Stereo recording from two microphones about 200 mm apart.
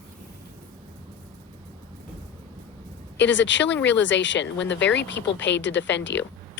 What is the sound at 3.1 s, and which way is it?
Speech, 65° left (ahead or behind).